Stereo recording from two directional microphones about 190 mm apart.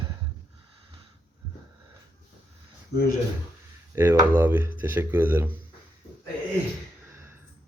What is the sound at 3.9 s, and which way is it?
Speech, 10° right (ahead or behind).